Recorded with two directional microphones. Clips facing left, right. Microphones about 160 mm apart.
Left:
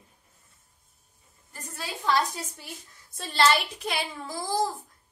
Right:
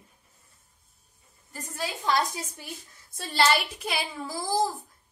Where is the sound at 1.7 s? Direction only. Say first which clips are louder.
Even; 15° right (ahead or behind).